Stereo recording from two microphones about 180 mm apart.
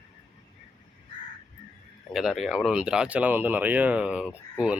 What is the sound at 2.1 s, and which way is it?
A man's voice, centre (ahead or behind).